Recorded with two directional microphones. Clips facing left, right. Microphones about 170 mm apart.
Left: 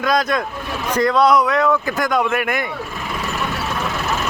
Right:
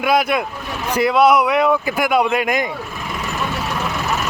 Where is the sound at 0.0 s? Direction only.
10° right (ahead or behind).